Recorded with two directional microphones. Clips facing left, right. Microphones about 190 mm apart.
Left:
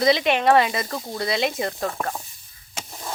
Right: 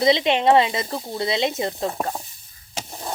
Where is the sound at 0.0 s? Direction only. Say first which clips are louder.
Right 1 dB; 25° right (ahead or behind).